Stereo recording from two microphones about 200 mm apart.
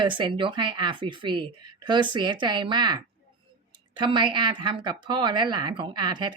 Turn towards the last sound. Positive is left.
turn(degrees=-20)  # may be behind; listen again after turning